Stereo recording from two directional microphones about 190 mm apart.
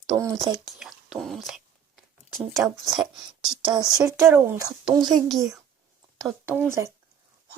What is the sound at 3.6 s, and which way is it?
A woman's voice, 20° right (ahead or behind).